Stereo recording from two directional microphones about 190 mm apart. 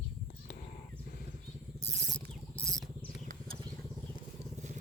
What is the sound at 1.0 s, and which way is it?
Wild animals, 55° left (ahead or behind).